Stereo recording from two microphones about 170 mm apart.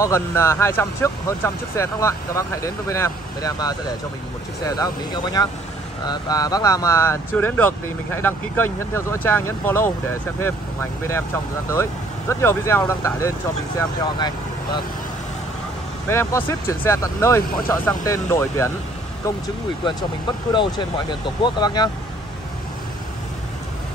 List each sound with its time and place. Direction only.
0.0 s speech: 20° left (ahead or behind)
16.1 s speech: 15° left (ahead or behind)